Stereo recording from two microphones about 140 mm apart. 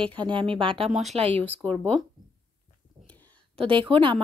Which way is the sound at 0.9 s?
Centre (ahead or behind).